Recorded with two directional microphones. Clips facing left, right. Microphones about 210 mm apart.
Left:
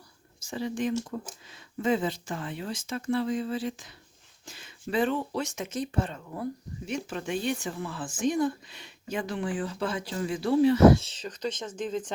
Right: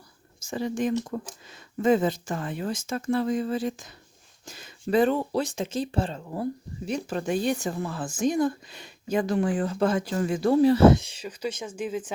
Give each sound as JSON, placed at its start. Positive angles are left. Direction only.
{"t": 0.3, "sound": "speech", "side_deg": -45}
{"t": 10.8, "sound": "speech", "side_deg": -15}